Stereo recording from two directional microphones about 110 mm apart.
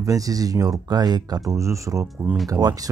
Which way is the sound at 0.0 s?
35° right (ahead or behind).